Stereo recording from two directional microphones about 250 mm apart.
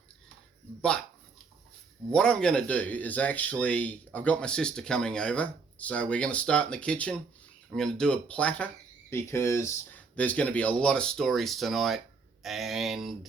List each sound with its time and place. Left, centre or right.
0.8 s speech: centre
2.1 s speech: centre